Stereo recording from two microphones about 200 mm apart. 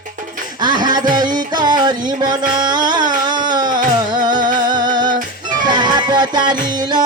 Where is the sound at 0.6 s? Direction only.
20° right (ahead or behind).